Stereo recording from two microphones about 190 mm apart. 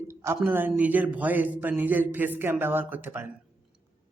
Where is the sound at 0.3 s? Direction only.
10° right (ahead or behind).